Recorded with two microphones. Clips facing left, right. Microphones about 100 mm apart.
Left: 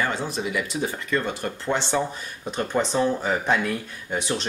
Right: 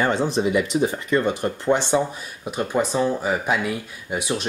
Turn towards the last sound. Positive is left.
turn(degrees=-10)  # may be behind; listen again after turning